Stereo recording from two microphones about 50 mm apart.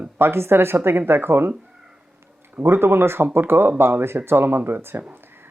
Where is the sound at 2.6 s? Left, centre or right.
Right.